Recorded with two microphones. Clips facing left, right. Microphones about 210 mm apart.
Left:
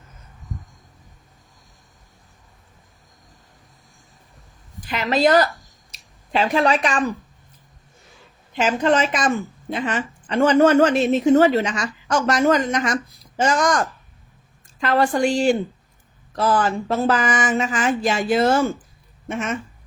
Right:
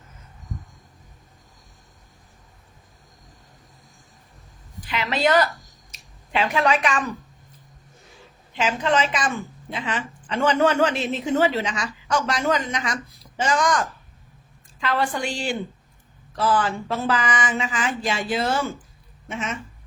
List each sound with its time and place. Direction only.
4.9 s a woman's voice: 40° left (ahead or behind)
8.5 s a woman's voice: 45° left (ahead or behind)